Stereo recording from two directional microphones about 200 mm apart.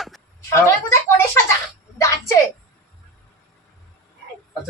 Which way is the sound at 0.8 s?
15° left (ahead or behind).